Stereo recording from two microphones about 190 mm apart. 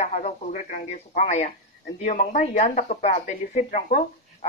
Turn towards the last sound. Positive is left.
turn(degrees=40)  # may be behind; listen again after turning